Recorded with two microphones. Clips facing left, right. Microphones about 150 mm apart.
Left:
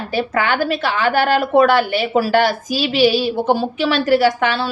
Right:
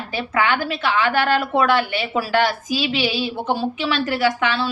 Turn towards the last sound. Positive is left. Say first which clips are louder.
# left 5 dB
turn(degrees=40)  # may be behind; listen again after turning